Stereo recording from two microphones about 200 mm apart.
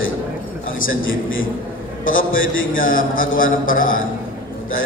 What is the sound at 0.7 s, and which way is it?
Speech, 80° left.